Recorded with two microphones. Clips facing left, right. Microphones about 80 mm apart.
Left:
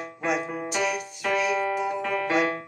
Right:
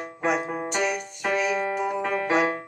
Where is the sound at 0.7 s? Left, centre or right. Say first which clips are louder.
Even; centre.